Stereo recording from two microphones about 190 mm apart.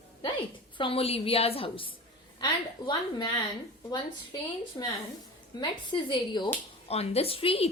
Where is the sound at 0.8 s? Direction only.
30° left (ahead or behind).